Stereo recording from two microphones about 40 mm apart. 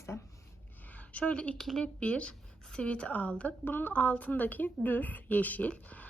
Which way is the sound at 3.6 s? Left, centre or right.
Left.